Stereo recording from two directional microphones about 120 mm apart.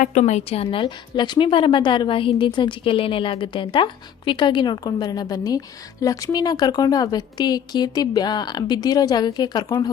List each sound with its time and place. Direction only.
0.0 s a woman's voice: 85° left; by 9.9 s 35° left (ahead or behind)